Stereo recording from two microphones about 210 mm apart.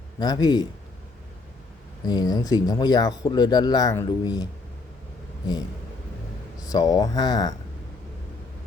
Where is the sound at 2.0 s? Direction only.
20° left (ahead or behind).